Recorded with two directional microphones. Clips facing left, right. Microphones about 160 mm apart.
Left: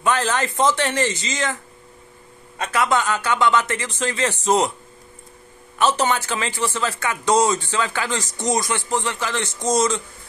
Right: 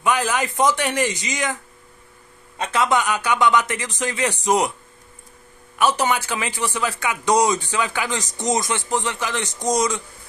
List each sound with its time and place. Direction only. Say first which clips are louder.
0.0 s a man's voice: even; 10° right (ahead or behind)
2.6 s a man's voice: even; 20° right (ahead or behind)
5.8 s a man's voice: even; 10° right (ahead or behind)